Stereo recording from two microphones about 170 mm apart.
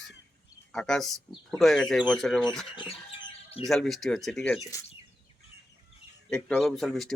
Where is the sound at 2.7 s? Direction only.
25° left (ahead or behind).